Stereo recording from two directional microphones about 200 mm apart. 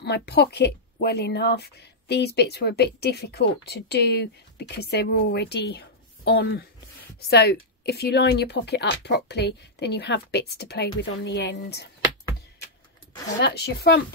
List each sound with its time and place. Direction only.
0.0 s a woman's voice: 55° left (ahead or behind)
13.4 s a woman's voice: 55° left (ahead or behind)